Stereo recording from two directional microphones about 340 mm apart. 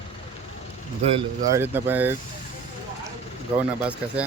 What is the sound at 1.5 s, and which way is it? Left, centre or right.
Speech, centre.